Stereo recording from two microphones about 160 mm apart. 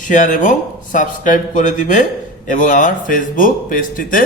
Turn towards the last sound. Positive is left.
turn(degrees=60)  # may be behind; listen again after turning